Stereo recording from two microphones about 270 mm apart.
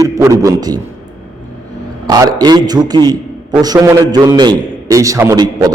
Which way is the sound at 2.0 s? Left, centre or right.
Centre.